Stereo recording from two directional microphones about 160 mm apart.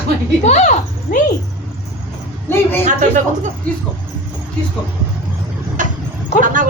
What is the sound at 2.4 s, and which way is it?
Speech, 15° left (ahead or behind).